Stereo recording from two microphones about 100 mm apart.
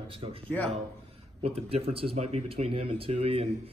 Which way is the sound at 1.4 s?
75° right (ahead or behind).